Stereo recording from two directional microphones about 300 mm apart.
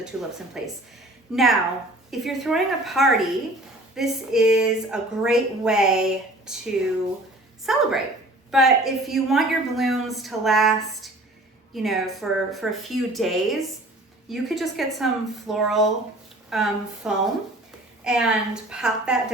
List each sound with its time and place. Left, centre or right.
0.6 s a woman's voice: centre